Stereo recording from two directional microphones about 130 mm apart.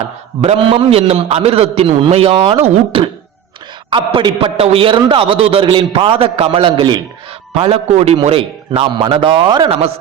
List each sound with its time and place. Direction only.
0.4 s a man's voice: 40° right (ahead or behind)
3.8 s a man's voice: 40° right (ahead or behind)
7.5 s a man's voice: 50° right (ahead or behind)